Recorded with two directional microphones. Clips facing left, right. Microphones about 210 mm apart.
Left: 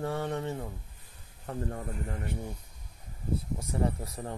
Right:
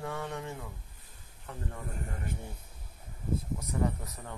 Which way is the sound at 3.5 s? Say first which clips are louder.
Left 2 dB; 30° left (ahead or behind).